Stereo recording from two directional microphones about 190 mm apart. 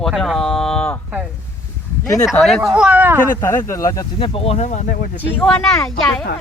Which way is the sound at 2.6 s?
5° right (ahead or behind).